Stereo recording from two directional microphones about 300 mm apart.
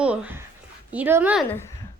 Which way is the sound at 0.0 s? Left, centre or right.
Centre.